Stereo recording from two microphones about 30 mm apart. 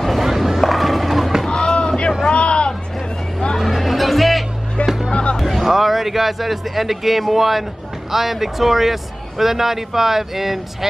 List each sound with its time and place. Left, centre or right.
0.0 s a sound: centre
0.4 s run: centre
1.5 s a sound: left
3.5 s music: centre
4.8 s music: centre
5.1 s music: left
5.4 s a man's voice: centre